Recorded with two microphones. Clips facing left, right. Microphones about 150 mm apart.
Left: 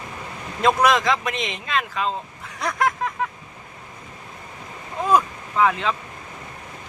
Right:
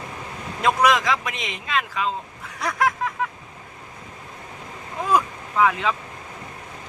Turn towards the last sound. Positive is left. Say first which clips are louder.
# even
turn(degrees=-5)  # may be behind; listen again after turning